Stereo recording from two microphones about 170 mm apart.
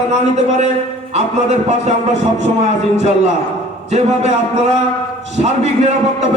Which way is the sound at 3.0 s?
40° right (ahead or behind).